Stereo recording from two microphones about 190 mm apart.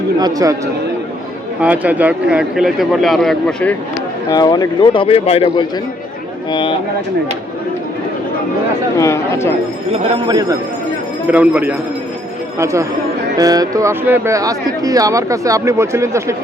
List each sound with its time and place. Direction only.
0.2 s speech: 20° right (ahead or behind)
1.6 s speech: 10° right (ahead or behind)
4.3 s speech: 20° left (ahead or behind)
9.0 s speech: 15° left (ahead or behind)
10.2 s speech: 20° right (ahead or behind)
11.3 s speech: 10° right (ahead or behind)